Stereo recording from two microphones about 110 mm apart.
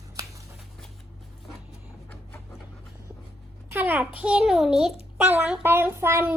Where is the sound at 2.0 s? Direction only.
15° left (ahead or behind).